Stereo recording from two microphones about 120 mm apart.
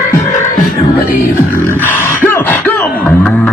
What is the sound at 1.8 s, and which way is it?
Beatboxing, 20° left (ahead or behind).